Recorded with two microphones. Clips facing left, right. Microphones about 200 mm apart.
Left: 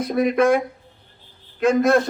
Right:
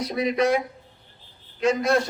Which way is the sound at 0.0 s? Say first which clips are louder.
Left 5 dB; 50° left (ahead or behind).